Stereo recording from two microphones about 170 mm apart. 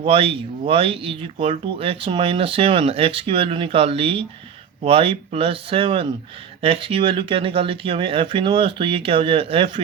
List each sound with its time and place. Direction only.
0.0 s speech: 35° right (ahead or behind)